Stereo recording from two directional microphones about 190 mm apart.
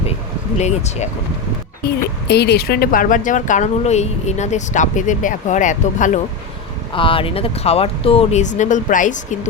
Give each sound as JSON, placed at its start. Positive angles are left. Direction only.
{"t": 0.6, "sound": "speech", "side_deg": 35}
{"t": 2.2, "sound": "speech", "side_deg": 60}
{"t": 6.9, "sound": "speech", "side_deg": 25}